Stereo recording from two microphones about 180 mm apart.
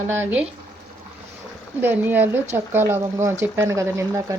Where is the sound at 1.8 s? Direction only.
10° right (ahead or behind).